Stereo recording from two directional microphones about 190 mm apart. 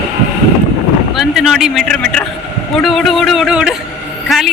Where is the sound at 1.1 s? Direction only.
Centre (ahead or behind).